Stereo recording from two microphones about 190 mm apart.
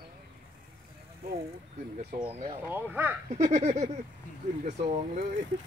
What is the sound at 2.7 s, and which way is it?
Speech, 10° right (ahead or behind).